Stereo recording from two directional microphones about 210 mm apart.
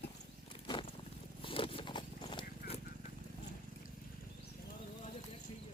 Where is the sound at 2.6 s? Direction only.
45° left (ahead or behind).